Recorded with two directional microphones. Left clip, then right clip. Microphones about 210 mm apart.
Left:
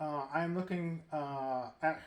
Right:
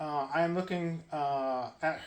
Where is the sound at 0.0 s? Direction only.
35° left (ahead or behind).